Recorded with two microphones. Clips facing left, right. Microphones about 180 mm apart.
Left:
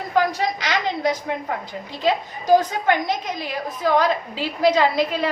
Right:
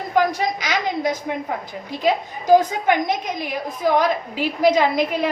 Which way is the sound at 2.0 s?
15° right (ahead or behind).